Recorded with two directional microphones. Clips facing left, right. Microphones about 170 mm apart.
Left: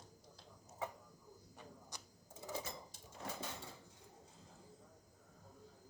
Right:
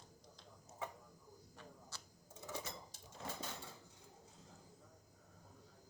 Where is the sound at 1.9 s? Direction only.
15° left (ahead or behind).